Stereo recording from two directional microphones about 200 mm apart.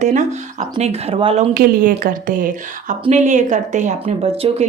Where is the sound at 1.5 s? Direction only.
45° right (ahead or behind).